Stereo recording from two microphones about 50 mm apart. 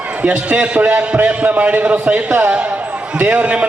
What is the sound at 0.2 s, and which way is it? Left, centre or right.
A man's voice, right.